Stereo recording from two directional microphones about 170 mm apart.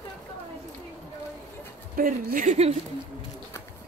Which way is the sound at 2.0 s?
50° right (ahead or behind).